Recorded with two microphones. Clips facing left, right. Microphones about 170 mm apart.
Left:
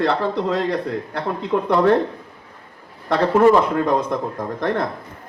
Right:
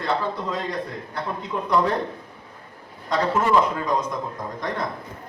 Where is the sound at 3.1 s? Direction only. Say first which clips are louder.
Left 6 dB; 60° left (ahead or behind).